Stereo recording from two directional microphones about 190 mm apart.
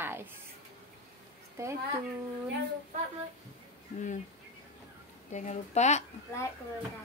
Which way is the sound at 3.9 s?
40° left (ahead or behind).